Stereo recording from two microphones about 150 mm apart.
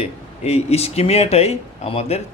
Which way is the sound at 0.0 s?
45° left (ahead or behind).